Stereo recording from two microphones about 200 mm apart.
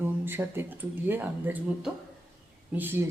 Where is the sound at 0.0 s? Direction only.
10° right (ahead or behind).